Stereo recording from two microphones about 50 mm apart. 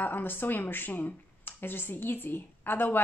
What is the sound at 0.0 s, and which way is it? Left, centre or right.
Speech, left.